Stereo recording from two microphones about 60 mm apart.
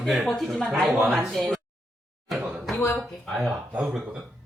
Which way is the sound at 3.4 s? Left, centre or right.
Centre.